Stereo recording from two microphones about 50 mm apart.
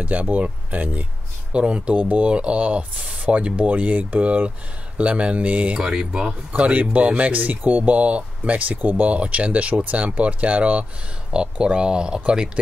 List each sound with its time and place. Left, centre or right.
0.0 s speech: right
5.8 s speech: centre
6.5 s speech: right